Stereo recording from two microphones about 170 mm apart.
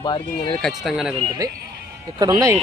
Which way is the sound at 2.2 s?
20° right (ahead or behind).